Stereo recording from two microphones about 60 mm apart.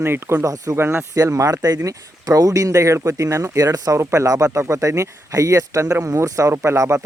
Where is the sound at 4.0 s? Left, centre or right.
Right.